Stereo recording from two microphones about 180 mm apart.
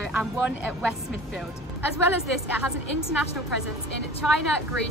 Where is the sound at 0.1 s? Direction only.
5° right (ahead or behind).